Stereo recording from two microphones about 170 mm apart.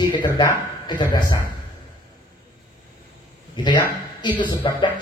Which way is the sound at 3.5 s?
25° left (ahead or behind).